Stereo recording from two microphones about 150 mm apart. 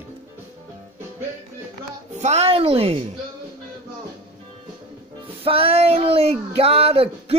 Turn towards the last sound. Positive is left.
turn(degrees=-40)  # may be behind; listen again after turning